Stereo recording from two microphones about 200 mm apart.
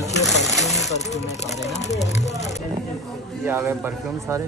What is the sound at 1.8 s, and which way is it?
Speech, 35° left (ahead or behind).